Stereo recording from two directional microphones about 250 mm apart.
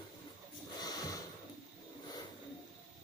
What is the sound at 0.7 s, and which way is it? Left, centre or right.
Snort, centre.